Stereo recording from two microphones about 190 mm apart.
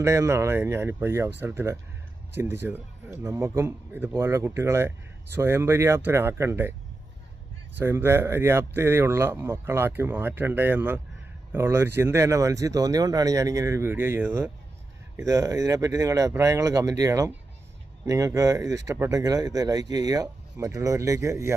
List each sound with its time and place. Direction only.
0.0 s speech: 15° right (ahead or behind)
7.8 s speech: 10° right (ahead or behind)